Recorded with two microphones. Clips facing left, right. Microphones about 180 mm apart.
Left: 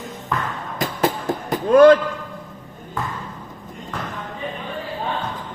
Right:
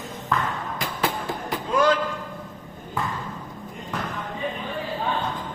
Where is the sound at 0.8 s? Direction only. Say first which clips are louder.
Left 7 dB; 45° left (ahead or behind).